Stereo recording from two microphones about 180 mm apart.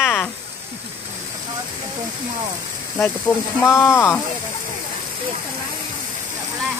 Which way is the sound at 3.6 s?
15° left (ahead or behind).